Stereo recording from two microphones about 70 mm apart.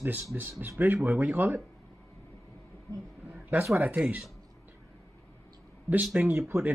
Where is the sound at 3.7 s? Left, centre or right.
Centre.